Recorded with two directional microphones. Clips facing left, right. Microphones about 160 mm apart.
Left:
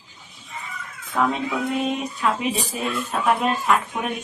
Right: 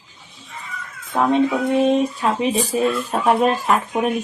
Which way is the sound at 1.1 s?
30° right (ahead or behind).